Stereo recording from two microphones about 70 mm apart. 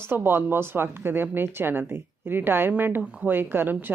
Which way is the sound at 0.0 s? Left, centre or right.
Right.